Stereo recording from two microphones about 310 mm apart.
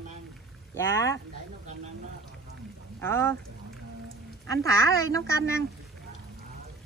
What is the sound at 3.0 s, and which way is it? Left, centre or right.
Speech, centre.